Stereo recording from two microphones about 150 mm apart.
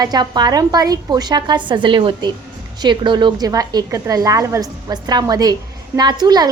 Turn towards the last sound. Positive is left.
turn(degrees=-25)  # may be behind; listen again after turning